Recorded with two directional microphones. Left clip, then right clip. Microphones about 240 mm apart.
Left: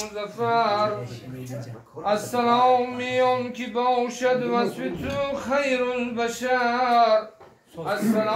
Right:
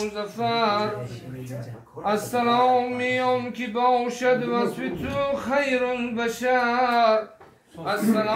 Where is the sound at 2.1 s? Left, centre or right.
Right.